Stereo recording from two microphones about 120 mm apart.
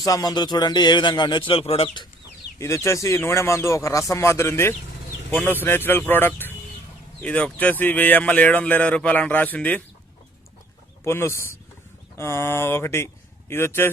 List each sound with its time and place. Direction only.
0.0 s speech: 30° left (ahead or behind)
2.6 s a man's voice: 25° left (ahead or behind)
11.0 s a man's voice: 20° left (ahead or behind)